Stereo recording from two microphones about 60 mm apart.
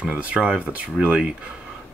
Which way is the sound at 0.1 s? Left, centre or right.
Right.